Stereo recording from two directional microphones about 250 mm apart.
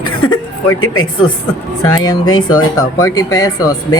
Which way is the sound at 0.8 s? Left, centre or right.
Left.